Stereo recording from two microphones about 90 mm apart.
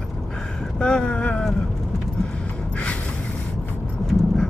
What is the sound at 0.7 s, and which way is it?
Speech, 10° left (ahead or behind).